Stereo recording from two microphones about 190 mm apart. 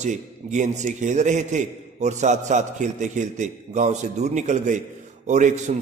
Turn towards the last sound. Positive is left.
turn(degrees=-40)  # may be behind; listen again after turning